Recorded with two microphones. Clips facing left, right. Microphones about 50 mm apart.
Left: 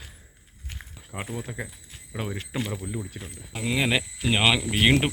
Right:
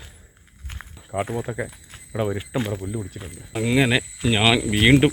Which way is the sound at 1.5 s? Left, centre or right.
Centre.